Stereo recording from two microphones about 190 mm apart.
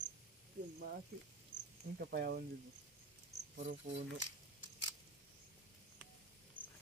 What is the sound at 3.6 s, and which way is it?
Speech, 40° right (ahead or behind).